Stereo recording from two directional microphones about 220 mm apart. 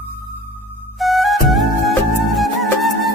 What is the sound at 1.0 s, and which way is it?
Music, centre (ahead or behind).